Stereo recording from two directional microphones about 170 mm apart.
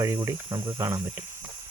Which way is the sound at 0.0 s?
15° right (ahead or behind).